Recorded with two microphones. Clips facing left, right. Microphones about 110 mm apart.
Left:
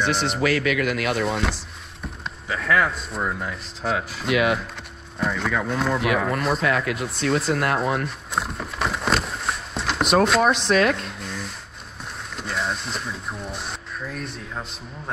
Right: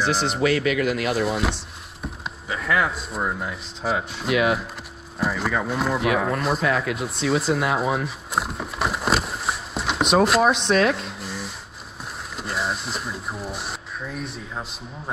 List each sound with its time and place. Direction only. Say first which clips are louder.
0.2 s speech: right 1 dB; centre (ahead or behind)
0.6 s speech: right 1 dB; 35° right (ahead or behind)
0.9 s speech: right 1 dB; centre (ahead or behind)
2.2 s a sound: left 2 dB; 5° right (ahead or behind)
3.3 s speech: even; 5° right (ahead or behind)